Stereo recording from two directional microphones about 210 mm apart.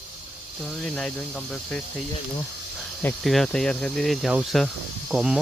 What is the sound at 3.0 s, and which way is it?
Speech, 5° left (ahead or behind).